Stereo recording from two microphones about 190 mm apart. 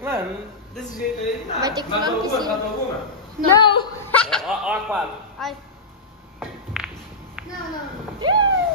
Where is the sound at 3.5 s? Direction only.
25° left (ahead or behind).